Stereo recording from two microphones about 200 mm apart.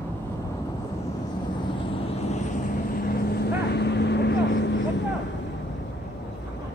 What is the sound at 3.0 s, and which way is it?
Vehicle, 50° left (ahead or behind).